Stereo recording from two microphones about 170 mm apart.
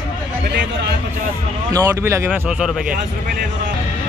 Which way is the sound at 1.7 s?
20° right (ahead or behind).